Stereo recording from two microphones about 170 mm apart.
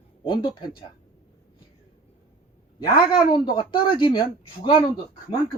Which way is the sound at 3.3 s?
30° left (ahead or behind).